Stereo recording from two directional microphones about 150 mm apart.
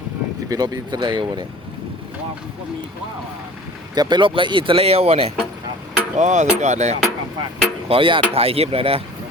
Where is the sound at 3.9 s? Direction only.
30° right (ahead or behind).